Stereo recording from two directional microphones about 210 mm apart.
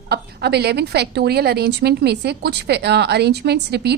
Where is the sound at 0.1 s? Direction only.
50° right (ahead or behind).